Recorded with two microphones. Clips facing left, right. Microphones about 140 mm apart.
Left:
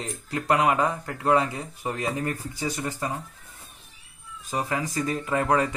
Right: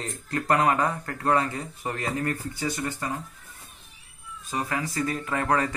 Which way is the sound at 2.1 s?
15° left (ahead or behind).